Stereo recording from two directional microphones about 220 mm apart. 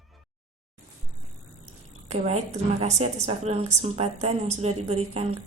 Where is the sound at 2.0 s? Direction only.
30° right (ahead or behind).